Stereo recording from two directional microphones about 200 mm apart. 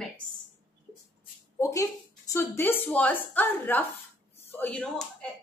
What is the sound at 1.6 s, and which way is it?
Speech, 15° left (ahead or behind).